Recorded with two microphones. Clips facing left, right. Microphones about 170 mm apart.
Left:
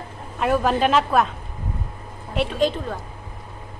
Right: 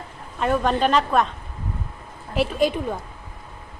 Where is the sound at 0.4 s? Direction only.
5° left (ahead or behind).